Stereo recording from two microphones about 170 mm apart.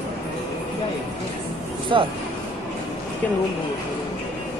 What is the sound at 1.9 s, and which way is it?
Speech, 30° right (ahead or behind).